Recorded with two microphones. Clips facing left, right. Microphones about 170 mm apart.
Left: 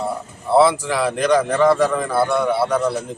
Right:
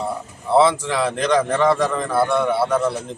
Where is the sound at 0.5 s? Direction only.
5° left (ahead or behind).